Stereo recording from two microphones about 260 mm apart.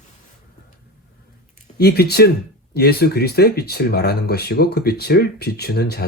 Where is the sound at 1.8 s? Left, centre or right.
Left.